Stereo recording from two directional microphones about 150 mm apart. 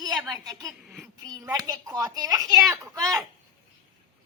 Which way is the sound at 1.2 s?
25° right (ahead or behind).